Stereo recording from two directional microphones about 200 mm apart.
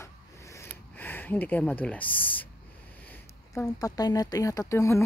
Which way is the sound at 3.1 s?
10° left (ahead or behind).